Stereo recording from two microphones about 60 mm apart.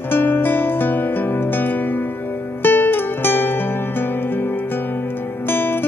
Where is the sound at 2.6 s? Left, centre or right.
Left.